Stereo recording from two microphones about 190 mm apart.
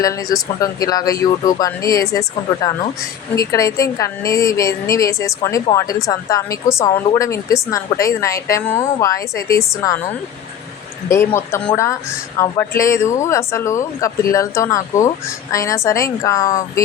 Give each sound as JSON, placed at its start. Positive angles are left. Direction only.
{"t": 0.0, "sound": "a woman's voice", "side_deg": 20}
{"t": 11.3, "sound": "a woman's voice", "side_deg": 15}